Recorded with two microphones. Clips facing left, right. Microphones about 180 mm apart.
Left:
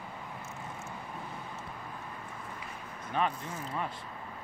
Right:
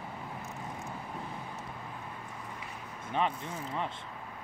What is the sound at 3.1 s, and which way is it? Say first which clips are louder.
Speech: even; 25° right (ahead or behind).